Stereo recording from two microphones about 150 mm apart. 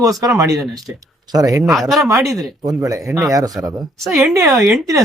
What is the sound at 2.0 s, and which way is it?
Speech, 20° right (ahead or behind).